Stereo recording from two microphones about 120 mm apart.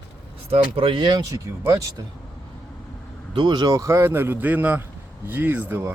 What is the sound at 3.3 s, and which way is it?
Speech, 40° right (ahead or behind).